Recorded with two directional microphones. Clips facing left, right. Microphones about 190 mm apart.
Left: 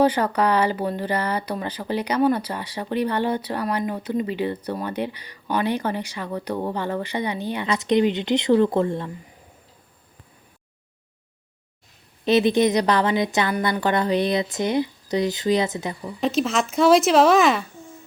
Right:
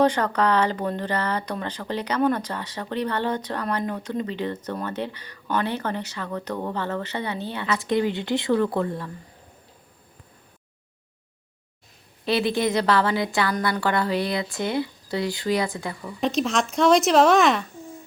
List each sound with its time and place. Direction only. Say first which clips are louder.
0.0 s speech: left 1 dB; 10° left (ahead or behind); by 9.0 s 25° left (ahead or behind)
12.2 s a woman's voice: left 5 dB; 20° left (ahead or behind)
16.2 s speech: left 1 dB; centre (ahead or behind)